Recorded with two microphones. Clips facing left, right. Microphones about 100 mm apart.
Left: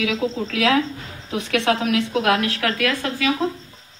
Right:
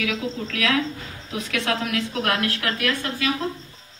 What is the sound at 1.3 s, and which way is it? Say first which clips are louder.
A woman's voice: left 5 dB; 70° left (ahead or behind).